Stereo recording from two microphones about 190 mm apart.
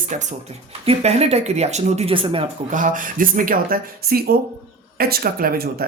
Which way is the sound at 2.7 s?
45° right (ahead or behind).